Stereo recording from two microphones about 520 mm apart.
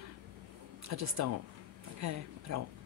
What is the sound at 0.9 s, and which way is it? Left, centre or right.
Speech, right.